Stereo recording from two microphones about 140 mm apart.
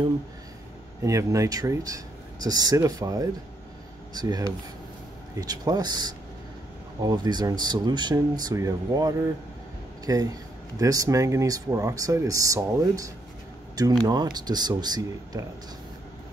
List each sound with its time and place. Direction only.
1.0 s speech: 25° right (ahead or behind)